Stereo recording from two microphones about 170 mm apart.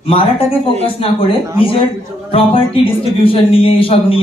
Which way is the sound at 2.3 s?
30° left (ahead or behind).